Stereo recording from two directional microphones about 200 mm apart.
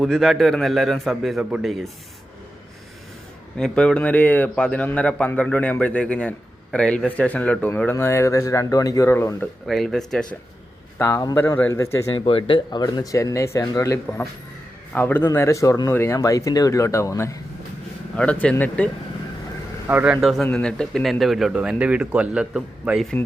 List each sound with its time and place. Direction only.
0.0 s a man's voice: centre (ahead or behind)
3.6 s a man's voice: 5° left (ahead or behind)
9.6 s a man's voice: centre (ahead or behind)
10.9 s a man's voice: 15° left (ahead or behind)
12.1 s a man's voice: 25° left (ahead or behind); by 18.9 s 5° left (ahead or behind)
19.9 s a man's voice: 5° right (ahead or behind)